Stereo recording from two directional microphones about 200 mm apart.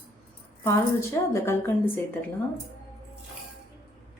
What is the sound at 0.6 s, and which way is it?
A woman's voice, 15° left (ahead or behind).